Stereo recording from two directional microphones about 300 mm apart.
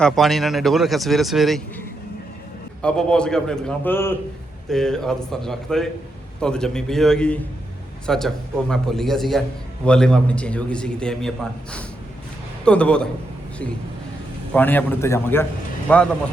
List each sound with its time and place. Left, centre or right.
0.0 s speech: centre
2.8 s speech: centre
12.6 s speech: centre
14.5 s a man's voice: centre